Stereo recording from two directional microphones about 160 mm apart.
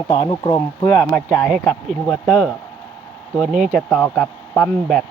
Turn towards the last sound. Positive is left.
turn(degrees=5)  # may be behind; listen again after turning